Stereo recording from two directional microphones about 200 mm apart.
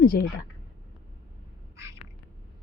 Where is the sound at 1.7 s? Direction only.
15° right (ahead or behind).